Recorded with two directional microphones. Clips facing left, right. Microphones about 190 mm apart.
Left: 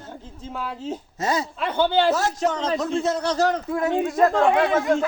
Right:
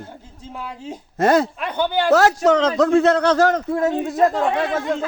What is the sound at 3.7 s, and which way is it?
Speech, 30° right (ahead or behind).